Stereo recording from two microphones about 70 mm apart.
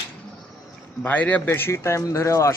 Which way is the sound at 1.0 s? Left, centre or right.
Left.